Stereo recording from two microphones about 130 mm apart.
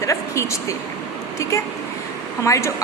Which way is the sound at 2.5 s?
25° left (ahead or behind).